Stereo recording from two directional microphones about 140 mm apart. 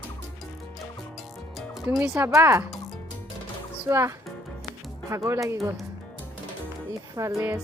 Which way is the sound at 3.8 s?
20° right (ahead or behind).